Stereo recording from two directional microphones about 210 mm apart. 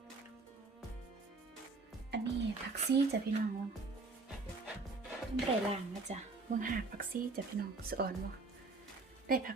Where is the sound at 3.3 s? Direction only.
50° right (ahead or behind).